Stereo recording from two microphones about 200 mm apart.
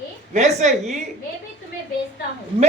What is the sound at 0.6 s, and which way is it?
Speech, 35° right (ahead or behind).